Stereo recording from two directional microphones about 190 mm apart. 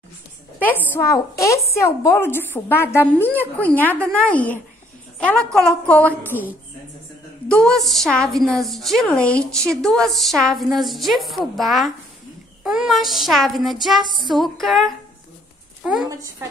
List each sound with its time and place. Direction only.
0.6 s a woman's voice: 10° left (ahead or behind)
14.0 s music: 25° left (ahead or behind)
14.3 s a woman's voice: centre (ahead or behind)